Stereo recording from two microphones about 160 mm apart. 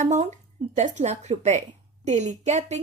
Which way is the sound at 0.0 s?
45° right (ahead or behind).